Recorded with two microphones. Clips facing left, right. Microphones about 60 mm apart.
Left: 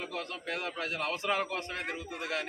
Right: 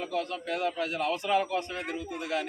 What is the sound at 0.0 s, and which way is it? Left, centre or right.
A man's voice, left.